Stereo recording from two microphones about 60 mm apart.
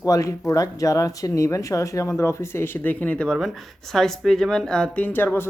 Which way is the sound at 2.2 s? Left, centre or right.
Left.